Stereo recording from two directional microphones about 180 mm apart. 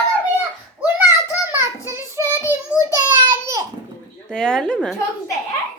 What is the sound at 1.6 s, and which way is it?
Speech, 15° right (ahead or behind).